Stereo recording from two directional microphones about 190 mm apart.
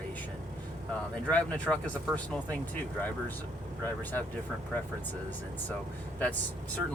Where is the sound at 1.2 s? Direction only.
5° left (ahead or behind).